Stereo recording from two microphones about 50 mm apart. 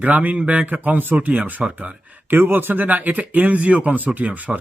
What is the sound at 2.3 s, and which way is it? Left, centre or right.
Speech, right.